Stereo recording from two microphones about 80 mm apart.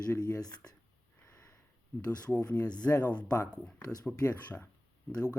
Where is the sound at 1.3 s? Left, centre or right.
Left.